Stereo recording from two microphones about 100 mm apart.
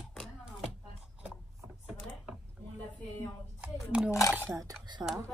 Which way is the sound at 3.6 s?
10° right (ahead or behind).